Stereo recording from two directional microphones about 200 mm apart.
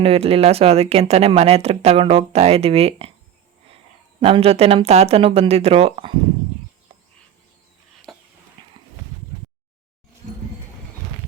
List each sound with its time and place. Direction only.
0.0 s speech: 30° right (ahead or behind)
4.2 s speech: 30° right (ahead or behind)
8.1 s a sound: centre (ahead or behind)
8.6 s horse: 25° right (ahead or behind)